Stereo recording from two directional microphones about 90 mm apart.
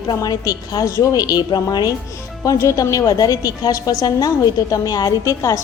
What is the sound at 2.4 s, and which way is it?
A woman's voice, 35° left (ahead or behind).